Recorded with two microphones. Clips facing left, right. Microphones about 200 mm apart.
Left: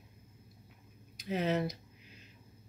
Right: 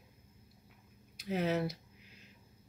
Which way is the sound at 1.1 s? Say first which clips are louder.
Left 1 dB; 5° right (ahead or behind).